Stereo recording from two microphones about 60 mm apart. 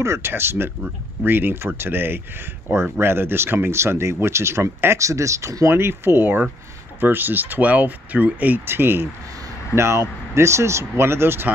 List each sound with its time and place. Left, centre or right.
0.0 s speech: right
5.7 s speech: right
8.6 s speech: right